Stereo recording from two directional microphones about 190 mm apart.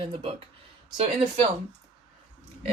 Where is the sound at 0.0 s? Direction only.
30° right (ahead or behind).